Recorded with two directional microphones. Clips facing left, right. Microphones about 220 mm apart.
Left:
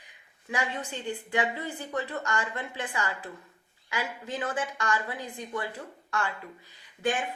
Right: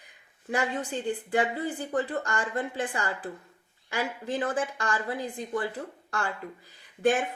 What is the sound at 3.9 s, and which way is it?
Speech, 35° right (ahead or behind).